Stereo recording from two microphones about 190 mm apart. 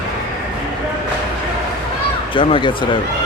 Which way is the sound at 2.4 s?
25° left (ahead or behind).